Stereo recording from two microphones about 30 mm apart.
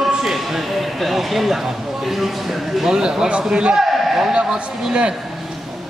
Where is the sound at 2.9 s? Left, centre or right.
Right.